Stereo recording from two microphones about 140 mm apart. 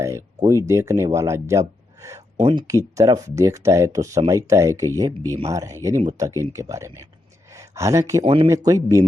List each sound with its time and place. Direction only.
0.0 s speech: 20° right (ahead or behind)
2.4 s speech: 35° right (ahead or behind)
2.6 s speech: 25° right (ahead or behind)
8.2 s speech: 40° right (ahead or behind)
8.4 s speech: 25° right (ahead or behind)